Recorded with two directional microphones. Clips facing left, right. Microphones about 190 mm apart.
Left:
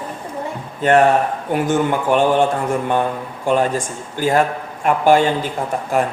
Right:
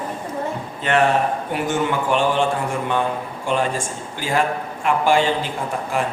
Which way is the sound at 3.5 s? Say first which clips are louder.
Left 5 dB; 45° left (ahead or behind).